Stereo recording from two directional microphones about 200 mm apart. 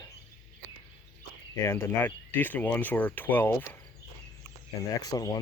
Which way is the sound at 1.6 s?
10° left (ahead or behind).